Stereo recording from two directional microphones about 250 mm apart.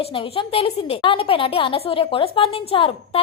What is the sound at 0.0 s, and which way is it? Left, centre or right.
A woman's voice, left.